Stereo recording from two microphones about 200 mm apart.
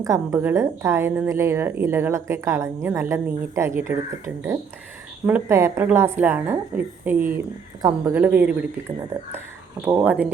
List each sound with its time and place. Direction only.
0.0 s a woman's voice: 15° right (ahead or behind)
5.2 s a woman's voice: 10° right (ahead or behind)
9.8 s a woman's voice: 10° right (ahead or behind)